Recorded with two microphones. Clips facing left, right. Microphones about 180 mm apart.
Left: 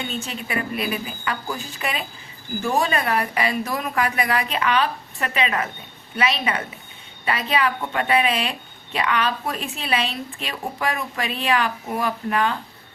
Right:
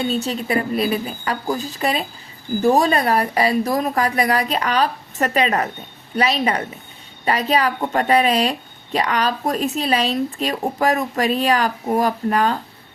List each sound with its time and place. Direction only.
0.0 s a woman's voice: 35° right (ahead or behind)